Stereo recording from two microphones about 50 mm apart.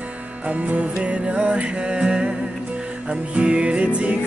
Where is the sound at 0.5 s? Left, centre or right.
Right.